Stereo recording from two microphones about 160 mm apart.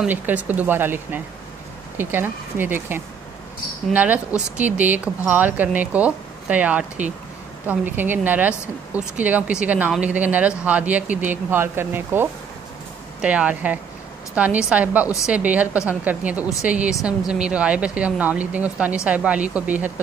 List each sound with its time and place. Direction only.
0.0 s speech: 10° right (ahead or behind)